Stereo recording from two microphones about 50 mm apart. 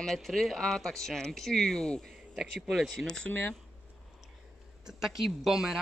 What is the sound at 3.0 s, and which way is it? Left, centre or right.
Speech, centre.